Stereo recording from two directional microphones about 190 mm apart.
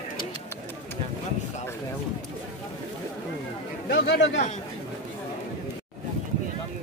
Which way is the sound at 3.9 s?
75° left (ahead or behind).